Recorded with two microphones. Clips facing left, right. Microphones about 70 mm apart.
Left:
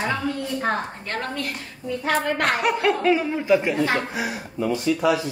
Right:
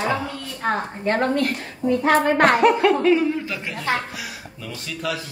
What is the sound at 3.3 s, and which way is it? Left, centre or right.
Speech, centre.